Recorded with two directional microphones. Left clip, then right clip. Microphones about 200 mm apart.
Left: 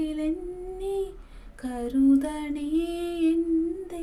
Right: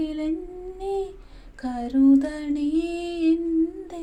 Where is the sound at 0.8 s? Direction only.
10° left (ahead or behind).